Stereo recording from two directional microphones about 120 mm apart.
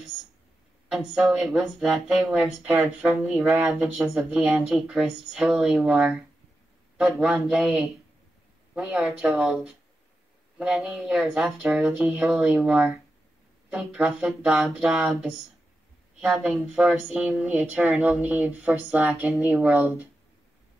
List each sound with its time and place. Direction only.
0.8 s speech: 5° right (ahead or behind)